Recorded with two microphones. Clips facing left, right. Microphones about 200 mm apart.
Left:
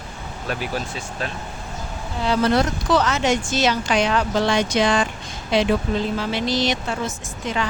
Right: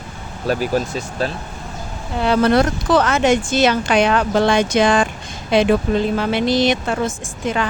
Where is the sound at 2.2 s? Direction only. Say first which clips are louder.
Right 4 dB; 60° right (ahead or behind).